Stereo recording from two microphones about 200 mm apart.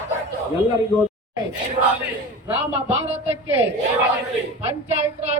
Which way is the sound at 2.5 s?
30° right (ahead or behind).